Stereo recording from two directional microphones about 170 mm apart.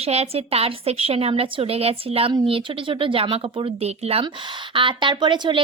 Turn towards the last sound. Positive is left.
turn(degrees=-25)  # may be behind; listen again after turning